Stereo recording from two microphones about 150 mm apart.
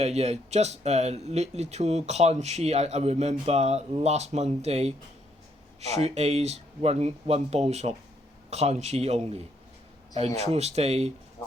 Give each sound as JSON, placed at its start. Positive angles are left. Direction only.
{"t": 0.0, "sound": "speech", "side_deg": -45}
{"t": 11.4, "sound": "speech", "side_deg": 30}